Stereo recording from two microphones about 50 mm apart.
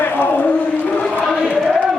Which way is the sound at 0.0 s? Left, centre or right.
Left.